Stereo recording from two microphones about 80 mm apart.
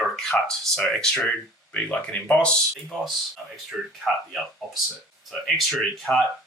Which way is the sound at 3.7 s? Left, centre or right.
Centre.